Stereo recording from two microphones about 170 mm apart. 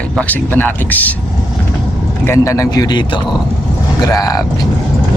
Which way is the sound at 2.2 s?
15° left (ahead or behind).